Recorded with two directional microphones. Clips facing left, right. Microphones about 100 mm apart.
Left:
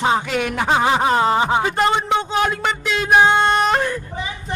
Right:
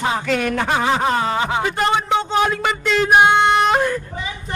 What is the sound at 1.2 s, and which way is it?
Speech, 25° left (ahead or behind).